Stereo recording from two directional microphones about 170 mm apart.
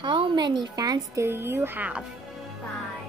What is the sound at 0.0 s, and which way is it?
A woman's voice, 30° right (ahead or behind).